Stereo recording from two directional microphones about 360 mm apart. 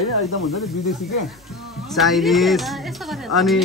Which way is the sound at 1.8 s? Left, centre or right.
Centre.